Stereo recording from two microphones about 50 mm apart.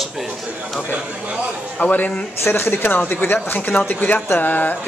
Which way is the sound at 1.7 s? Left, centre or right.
Left.